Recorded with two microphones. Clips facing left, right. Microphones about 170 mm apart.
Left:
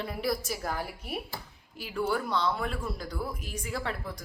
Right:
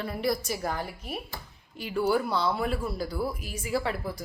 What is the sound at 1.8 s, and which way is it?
Speech, 5° right (ahead or behind).